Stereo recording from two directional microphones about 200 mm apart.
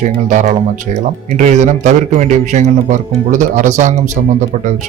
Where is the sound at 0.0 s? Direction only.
40° right (ahead or behind).